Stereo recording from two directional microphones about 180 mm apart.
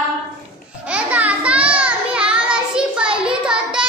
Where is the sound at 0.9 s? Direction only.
5° right (ahead or behind).